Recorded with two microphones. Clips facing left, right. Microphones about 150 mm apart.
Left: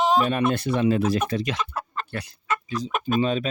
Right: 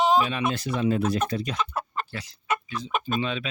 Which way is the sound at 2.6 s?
40° left (ahead or behind).